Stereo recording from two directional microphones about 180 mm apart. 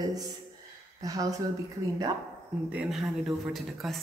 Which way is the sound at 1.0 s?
20° right (ahead or behind).